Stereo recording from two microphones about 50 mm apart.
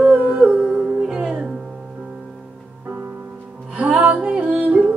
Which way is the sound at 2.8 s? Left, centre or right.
Right.